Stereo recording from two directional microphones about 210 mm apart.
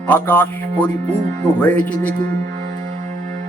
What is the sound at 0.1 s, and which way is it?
Music, 10° left (ahead or behind).